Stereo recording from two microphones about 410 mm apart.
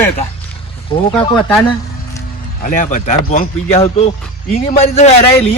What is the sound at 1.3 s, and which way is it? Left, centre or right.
Speech, centre.